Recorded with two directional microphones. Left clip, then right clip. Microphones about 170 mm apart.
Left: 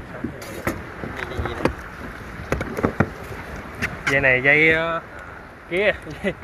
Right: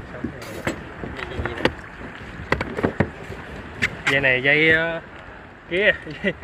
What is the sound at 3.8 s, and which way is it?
Speech, 10° right (ahead or behind).